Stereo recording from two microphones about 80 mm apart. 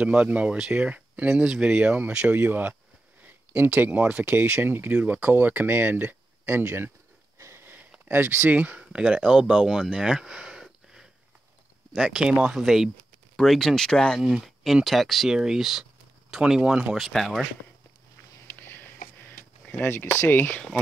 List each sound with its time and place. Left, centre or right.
0.0 s speech: centre
7.3 s sniff: right
8.1 s speech: right; by 9.8 s centre
9.9 s a sound: centre
11.9 s speech: centre
14.2 s speech: centre
16.9 s speech: centre
18.5 s sniff: left
19.8 s speech: left